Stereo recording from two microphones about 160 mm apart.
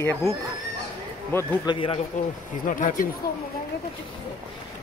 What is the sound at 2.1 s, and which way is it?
Speech, 50° left (ahead or behind).